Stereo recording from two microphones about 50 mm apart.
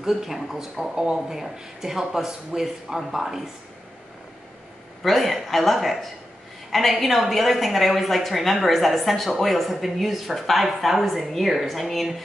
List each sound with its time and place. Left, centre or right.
0.0 s speech: centre
5.0 s a woman's voice: centre